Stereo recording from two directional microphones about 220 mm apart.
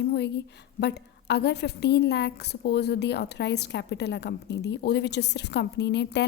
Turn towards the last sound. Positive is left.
turn(degrees=50)  # may be behind; listen again after turning